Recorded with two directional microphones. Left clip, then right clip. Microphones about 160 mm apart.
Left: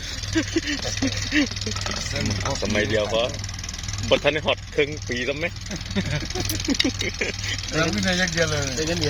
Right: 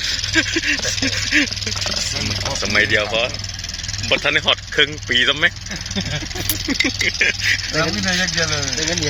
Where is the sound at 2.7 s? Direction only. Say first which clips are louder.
Right 8 dB; 20° left (ahead or behind).